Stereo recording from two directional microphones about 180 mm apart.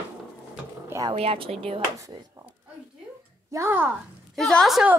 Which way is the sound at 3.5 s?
15° right (ahead or behind).